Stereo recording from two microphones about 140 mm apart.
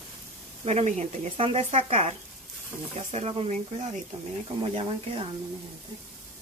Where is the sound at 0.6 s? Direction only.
50° right (ahead or behind).